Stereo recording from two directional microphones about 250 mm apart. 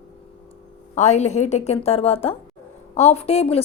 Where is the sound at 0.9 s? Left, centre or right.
Left.